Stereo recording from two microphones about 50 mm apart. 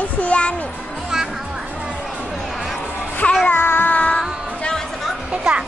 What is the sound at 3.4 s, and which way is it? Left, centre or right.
Music, left.